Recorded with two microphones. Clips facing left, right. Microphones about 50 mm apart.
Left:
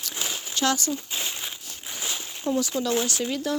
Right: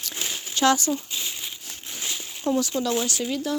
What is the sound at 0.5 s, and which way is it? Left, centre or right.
Speech, right.